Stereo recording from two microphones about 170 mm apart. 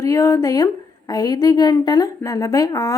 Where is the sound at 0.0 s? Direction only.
20° left (ahead or behind).